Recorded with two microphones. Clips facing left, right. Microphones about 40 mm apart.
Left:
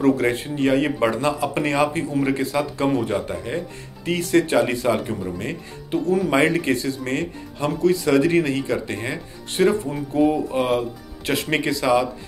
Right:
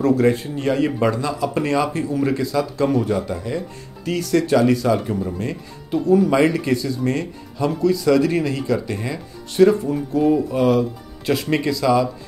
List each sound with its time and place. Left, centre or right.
0.0 s speech: left
10.2 s speech: left
10.5 s speech: left